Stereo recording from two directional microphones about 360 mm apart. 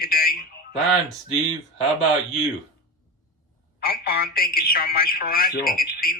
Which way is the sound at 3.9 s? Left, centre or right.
Left.